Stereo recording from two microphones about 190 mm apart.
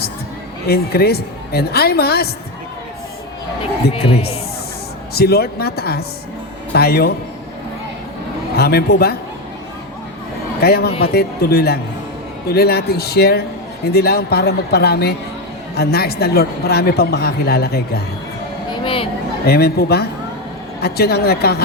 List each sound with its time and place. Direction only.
0.7 s a woman's voice: 55° left (ahead or behind)
3.9 s speech: 30° left (ahead or behind)
5.1 s a woman's voice: 55° left (ahead or behind)
8.5 s a woman's voice: 55° left (ahead or behind)
10.6 s a woman's voice: 55° left (ahead or behind)
18.7 s a sound: 30° left (ahead or behind)
19.5 s a woman's voice: 55° left (ahead or behind)